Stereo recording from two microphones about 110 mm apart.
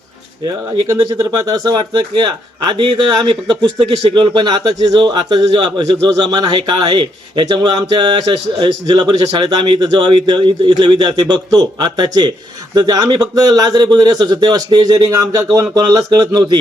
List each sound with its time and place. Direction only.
1.2 s speech: 35° right (ahead or behind)